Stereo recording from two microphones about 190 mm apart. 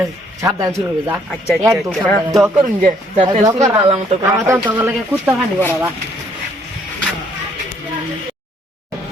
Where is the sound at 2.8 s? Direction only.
45° right (ahead or behind).